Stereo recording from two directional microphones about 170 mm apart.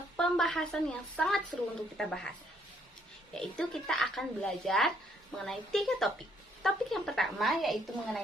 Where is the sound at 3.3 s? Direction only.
5° left (ahead or behind).